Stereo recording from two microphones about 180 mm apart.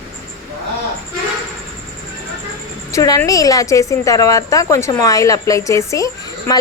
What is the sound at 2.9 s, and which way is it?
A woman's voice, 20° left (ahead or behind).